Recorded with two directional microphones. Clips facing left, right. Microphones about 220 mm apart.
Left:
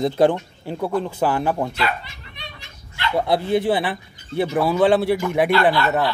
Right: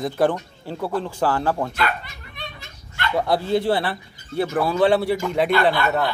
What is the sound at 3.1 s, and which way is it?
Speech, 20° left (ahead or behind).